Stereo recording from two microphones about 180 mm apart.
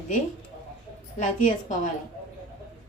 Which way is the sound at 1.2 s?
45° left (ahead or behind).